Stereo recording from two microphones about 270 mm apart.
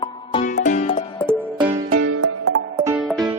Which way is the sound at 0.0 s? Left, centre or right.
Centre.